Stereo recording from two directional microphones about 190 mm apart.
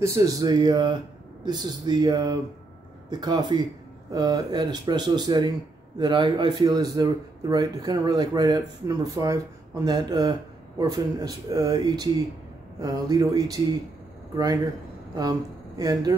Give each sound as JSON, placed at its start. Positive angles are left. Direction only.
{"t": 0.0, "sound": "a man's voice", "side_deg": -15}
{"t": 15.8, "sound": "speech", "side_deg": -20}